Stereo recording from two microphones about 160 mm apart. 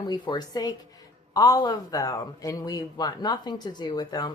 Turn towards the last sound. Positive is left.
turn(degrees=25)  # may be behind; listen again after turning